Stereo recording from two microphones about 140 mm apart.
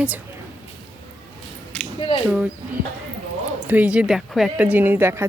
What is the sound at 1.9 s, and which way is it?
Speech, 40° left (ahead or behind).